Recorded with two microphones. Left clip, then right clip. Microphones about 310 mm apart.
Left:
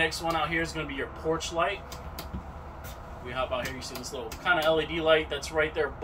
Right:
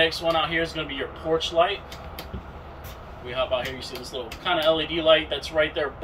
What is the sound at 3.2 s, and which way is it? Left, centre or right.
Speech, centre.